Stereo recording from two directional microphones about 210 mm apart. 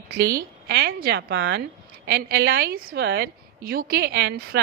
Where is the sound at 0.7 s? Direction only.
50° right (ahead or behind).